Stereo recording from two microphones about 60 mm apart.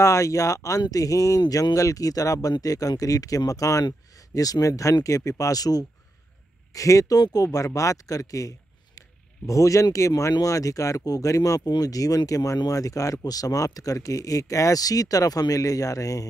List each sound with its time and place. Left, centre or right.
0.0 s speech: left
4.3 s speech: left
5.4 s speech: left
6.7 s speech: left